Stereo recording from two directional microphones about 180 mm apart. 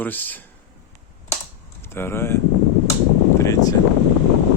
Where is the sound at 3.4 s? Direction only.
20° left (ahead or behind).